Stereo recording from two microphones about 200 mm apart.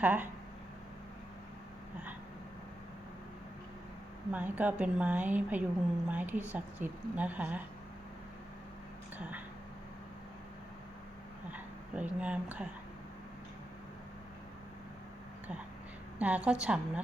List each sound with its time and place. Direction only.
0.0 s a woman's voice: 10° right (ahead or behind)
4.3 s a woman's voice: 10° right (ahead or behind)
9.1 s speech: 10° right (ahead or behind)
11.5 s speech: 5° right (ahead or behind)
16.1 s a woman's voice: 5° right (ahead or behind)